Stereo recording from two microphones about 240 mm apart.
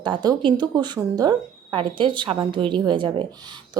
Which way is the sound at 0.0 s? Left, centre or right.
Centre.